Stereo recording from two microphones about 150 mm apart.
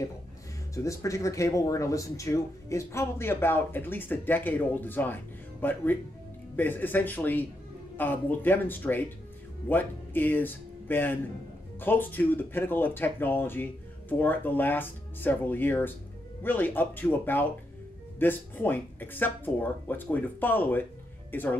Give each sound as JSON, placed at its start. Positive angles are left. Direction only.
{"t": 0.8, "sound": "speech", "side_deg": 20}